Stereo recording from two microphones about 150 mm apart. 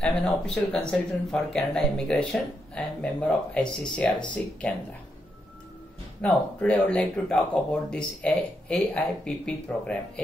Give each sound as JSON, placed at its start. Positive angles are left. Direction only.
{"t": 0.0, "sound": "speech", "side_deg": 5}
{"t": 6.2, "sound": "speech", "side_deg": 5}